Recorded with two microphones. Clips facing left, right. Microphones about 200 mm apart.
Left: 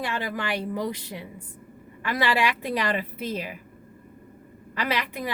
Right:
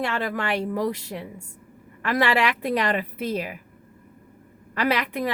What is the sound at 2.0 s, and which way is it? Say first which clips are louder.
A woman's voice: right 3 dB; 60° right (ahead or behind).